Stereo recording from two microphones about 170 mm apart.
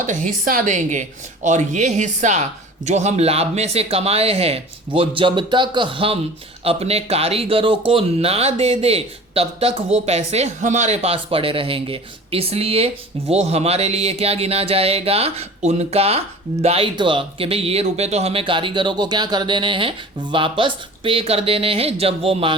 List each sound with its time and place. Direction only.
0.0 s a woman's voice: 50° right (ahead or behind)